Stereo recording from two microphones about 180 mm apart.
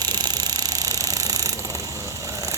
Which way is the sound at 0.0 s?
25° right (ahead or behind).